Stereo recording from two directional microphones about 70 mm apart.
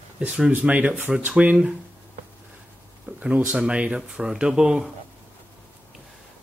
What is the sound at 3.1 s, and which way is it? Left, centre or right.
Speech, right.